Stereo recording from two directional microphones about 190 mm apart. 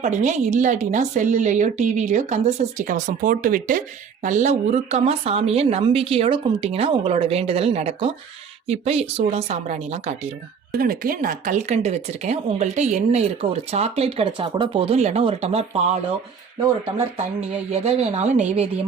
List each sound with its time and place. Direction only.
0.0 s speech: 40° right (ahead or behind)
10.7 s speech: 50° right (ahead or behind)
17.7 s speech: 35° right (ahead or behind)